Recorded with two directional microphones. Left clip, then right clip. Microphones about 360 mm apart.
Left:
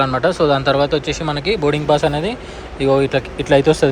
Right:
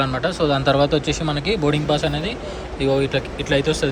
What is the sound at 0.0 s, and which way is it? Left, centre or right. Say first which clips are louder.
Speech: left 5 dB; centre.